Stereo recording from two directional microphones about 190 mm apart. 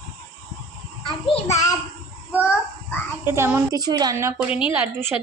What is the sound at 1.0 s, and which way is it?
Child singing, 35° left (ahead or behind).